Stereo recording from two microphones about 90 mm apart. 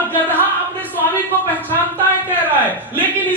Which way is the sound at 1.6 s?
20° left (ahead or behind).